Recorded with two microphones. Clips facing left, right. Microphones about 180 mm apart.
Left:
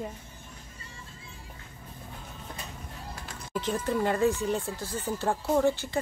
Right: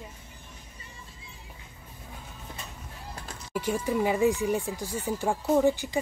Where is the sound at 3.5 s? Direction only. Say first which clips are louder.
Right 1 dB; 10° right (ahead or behind).